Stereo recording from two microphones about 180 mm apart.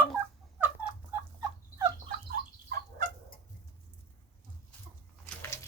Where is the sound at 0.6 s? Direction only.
10° right (ahead or behind).